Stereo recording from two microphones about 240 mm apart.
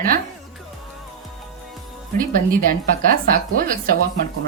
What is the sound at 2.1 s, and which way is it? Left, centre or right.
A woman's voice, right.